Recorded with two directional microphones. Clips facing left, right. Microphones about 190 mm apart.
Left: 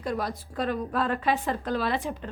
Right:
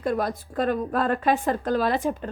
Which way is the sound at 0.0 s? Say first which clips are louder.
Right 5 dB; 50° right (ahead or behind).